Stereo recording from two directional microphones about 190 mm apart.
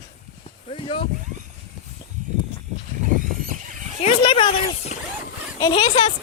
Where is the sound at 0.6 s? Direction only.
25° left (ahead or behind).